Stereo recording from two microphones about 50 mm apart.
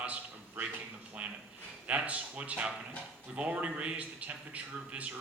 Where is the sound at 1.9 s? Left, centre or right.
Right.